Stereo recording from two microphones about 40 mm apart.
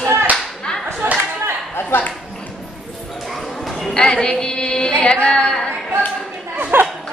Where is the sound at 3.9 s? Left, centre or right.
Left.